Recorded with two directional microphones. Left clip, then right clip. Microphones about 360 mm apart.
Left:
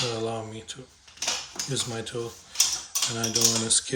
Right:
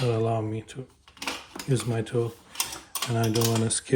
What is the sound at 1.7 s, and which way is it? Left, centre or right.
Speech, centre.